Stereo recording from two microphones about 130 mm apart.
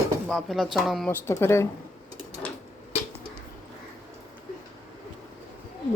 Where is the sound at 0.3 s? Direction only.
Centre (ahead or behind).